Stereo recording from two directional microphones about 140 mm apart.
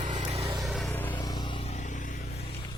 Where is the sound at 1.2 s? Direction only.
30° left (ahead or behind); by 2.1 s 65° left (ahead or behind).